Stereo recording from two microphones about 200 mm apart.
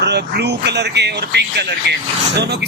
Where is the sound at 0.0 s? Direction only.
55° right (ahead or behind).